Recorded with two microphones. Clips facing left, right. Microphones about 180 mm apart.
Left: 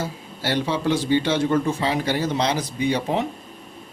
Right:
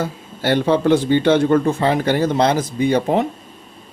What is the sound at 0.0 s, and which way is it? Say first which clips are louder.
Speech: right 6 dB; 55° right (ahead or behind).